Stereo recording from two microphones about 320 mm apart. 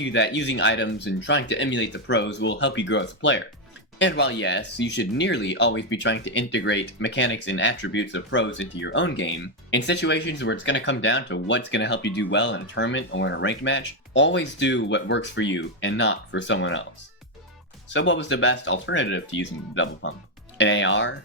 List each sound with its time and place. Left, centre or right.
0.0 s speech: left
17.8 s speech: left